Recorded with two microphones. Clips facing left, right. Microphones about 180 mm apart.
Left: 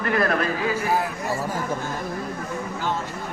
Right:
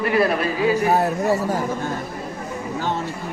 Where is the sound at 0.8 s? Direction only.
40° right (ahead or behind).